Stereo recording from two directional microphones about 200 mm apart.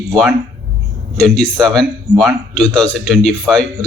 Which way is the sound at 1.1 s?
5° left (ahead or behind).